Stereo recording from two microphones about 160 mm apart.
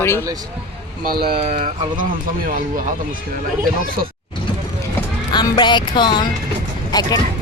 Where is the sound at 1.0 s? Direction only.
75° right (ahead or behind).